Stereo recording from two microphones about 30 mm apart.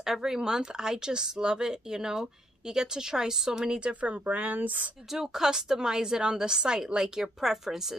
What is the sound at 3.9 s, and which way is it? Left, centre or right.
Speech, right.